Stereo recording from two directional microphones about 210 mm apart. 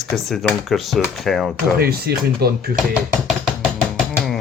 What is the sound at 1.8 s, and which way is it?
Speech, 45° right (ahead or behind).